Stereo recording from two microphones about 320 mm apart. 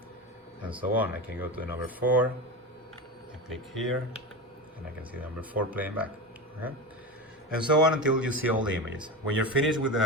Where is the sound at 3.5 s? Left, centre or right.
Centre.